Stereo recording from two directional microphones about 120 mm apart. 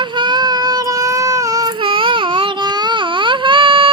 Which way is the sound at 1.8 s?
45° right (ahead or behind).